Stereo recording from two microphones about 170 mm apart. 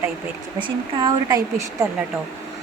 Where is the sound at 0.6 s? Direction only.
25° right (ahead or behind).